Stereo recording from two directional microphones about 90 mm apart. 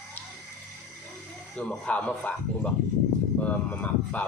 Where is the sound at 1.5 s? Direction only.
15° left (ahead or behind).